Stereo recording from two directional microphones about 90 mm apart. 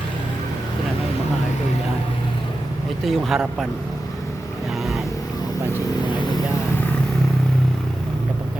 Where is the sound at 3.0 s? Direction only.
Centre (ahead or behind).